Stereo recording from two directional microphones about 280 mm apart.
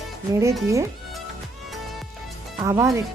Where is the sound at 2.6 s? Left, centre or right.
Centre.